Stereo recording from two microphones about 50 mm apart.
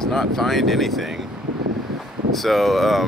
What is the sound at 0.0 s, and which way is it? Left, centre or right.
Speech, centre.